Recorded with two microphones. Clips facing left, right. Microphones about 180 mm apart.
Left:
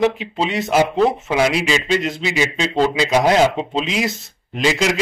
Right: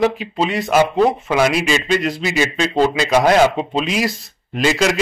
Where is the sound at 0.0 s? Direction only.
25° left (ahead or behind).